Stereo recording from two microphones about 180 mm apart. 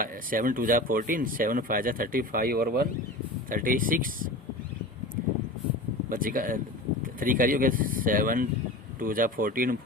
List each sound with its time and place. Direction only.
0.0 s speech: 50° right (ahead or behind)
6.1 s speech: 50° right (ahead or behind)